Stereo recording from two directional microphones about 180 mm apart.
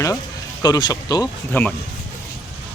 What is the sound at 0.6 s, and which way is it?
Speech, 25° left (ahead or behind).